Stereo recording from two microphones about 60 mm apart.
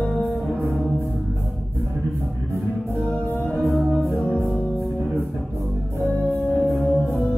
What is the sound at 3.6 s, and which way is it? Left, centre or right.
Music, centre.